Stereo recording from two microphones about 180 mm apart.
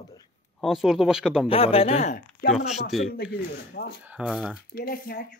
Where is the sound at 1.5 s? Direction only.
30° left (ahead or behind).